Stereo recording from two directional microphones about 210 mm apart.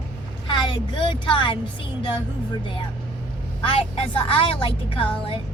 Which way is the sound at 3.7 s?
25° left (ahead or behind).